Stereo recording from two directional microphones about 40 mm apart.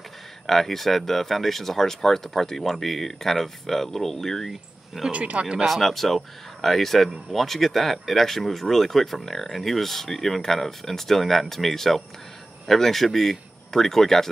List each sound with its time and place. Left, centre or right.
0.5 s speech: centre
4.5 s speech: centre
5.1 s speech: right
5.7 s speech: centre